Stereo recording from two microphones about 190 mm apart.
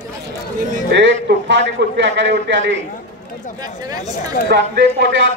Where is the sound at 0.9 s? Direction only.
70° right (ahead or behind).